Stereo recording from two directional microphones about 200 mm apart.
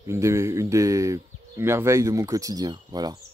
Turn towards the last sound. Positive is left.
turn(degrees=-20)  # may be behind; listen again after turning